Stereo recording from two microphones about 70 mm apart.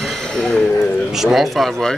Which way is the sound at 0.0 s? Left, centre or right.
Centre.